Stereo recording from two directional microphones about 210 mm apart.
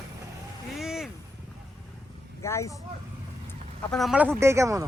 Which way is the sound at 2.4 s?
15° left (ahead or behind).